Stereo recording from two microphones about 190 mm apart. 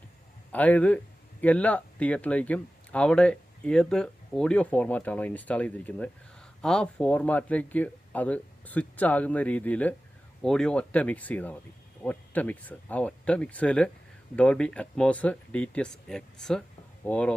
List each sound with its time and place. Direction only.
0.5 s speech: 10° left (ahead or behind)